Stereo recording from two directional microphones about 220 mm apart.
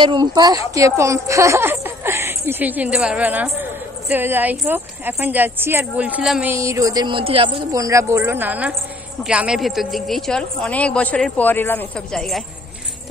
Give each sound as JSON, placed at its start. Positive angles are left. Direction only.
{"t": 0.0, "sound": "a woman's voice", "side_deg": -20}